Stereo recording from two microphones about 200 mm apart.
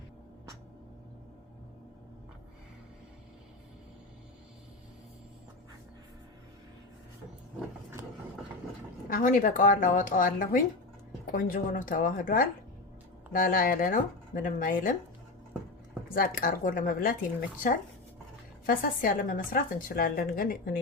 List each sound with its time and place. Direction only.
9.0 s a woman's voice: 45° left (ahead or behind)
16.0 s a woman's voice: 45° left (ahead or behind)
18.6 s a woman's voice: 45° left (ahead or behind)